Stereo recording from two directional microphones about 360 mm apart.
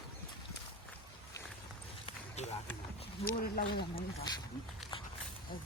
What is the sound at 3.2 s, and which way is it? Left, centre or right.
Speech, left.